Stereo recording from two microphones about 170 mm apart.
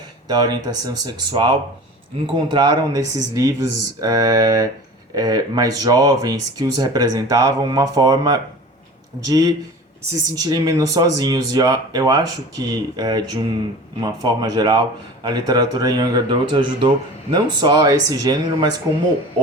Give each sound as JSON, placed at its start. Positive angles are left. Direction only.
{"t": 0.3, "sound": "speech", "side_deg": -25}